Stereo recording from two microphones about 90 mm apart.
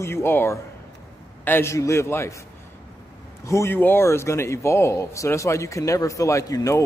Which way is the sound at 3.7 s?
25° left (ahead or behind).